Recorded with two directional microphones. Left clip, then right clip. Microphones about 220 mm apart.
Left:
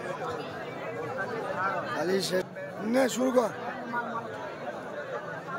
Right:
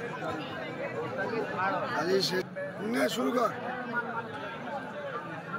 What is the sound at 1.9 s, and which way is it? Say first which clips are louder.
Speech: even; 15° left (ahead or behind).